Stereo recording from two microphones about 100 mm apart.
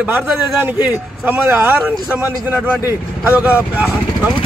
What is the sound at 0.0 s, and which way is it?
Speech, 15° right (ahead or behind).